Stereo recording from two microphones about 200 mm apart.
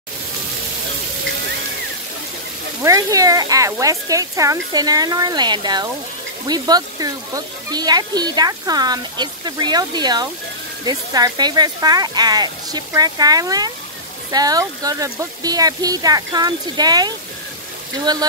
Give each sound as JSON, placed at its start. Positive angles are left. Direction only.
{"t": 2.8, "sound": "speech", "side_deg": -15}